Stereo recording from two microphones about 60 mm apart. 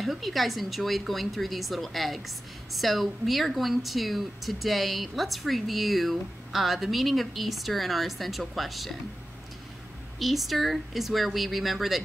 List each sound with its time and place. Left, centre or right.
0.0 s speech: centre
10.1 s speech: centre